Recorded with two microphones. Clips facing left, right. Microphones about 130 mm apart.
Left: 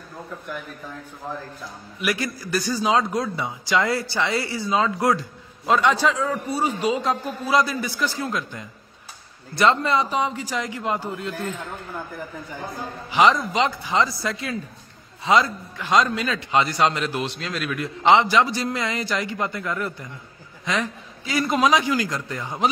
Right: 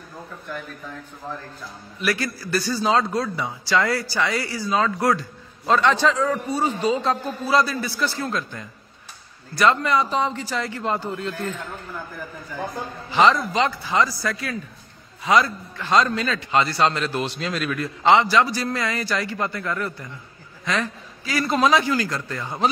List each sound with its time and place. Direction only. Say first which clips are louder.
2.0 s speech: right 1 dB; 15° left (ahead or behind)
5.7 s a man's voice: right 1 dB; 10° left (ahead or behind)
9.6 s speech: even; 25° left (ahead or behind)
10.0 s a man's voice: right 1 dB; 10° left (ahead or behind)
13.1 s a man's voice: even; 15° left (ahead or behind)
17.2 s speech: right 2 dB; centre (ahead or behind)
17.7 s a man's voice: left 1 dB; 20° left (ahead or behind)